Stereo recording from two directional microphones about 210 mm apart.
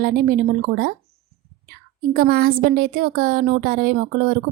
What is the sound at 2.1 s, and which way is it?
A woman's voice, 45° right (ahead or behind).